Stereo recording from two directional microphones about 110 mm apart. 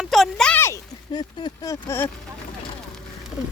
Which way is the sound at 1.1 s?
40° left (ahead or behind).